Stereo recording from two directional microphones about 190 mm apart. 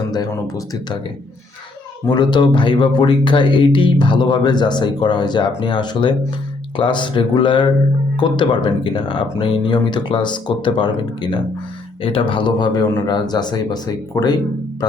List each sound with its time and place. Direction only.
0.1 s speech: 20° left (ahead or behind)
2.0 s speech: 25° left (ahead or behind)